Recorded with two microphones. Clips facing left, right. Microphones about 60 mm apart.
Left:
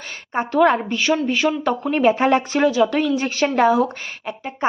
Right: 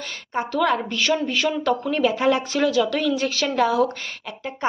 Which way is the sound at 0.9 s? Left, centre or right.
Centre.